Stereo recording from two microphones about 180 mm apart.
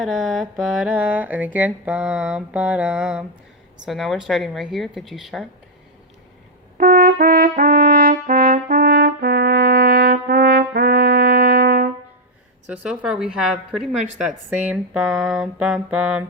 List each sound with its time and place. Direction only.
0.0 s mantra: centre (ahead or behind)
6.7 s brass instrument: 55° right (ahead or behind)
12.6 s mantra: 5° right (ahead or behind)